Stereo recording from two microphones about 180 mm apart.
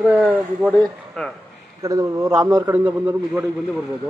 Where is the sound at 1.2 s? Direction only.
5° left (ahead or behind).